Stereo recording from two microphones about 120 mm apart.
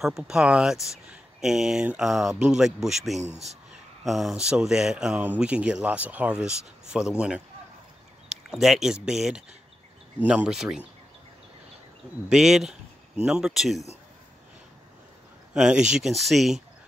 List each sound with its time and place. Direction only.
0.0 s speech: 5° right (ahead or behind)
3.2 s speech: 70° right (ahead or behind)
4.0 s speech: centre (ahead or behind)
12.3 s speech: 5° right (ahead or behind)
15.5 s speech: 5° right (ahead or behind)